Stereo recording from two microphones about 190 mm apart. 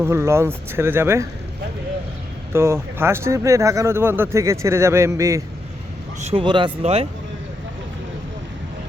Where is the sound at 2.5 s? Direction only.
15° right (ahead or behind).